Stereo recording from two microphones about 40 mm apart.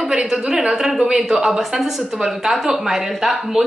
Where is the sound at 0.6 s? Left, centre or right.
Centre.